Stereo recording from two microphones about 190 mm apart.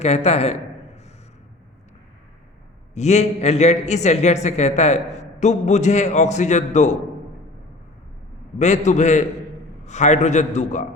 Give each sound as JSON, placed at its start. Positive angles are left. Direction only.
{"t": 0.0, "sound": "a man's voice", "side_deg": 35}
{"t": 2.9, "sound": "a man's voice", "side_deg": 35}
{"t": 8.5, "sound": "a man's voice", "side_deg": 40}